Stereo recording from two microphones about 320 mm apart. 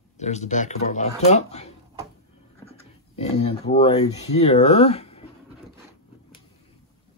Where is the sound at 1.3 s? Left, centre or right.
Centre.